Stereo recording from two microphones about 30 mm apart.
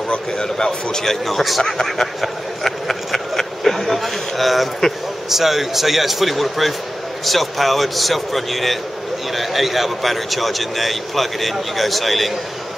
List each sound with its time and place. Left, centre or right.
0.4 s speech: left
1.2 s a man's voice: centre
1.7 s a sound: centre
5.3 s a man's voice: centre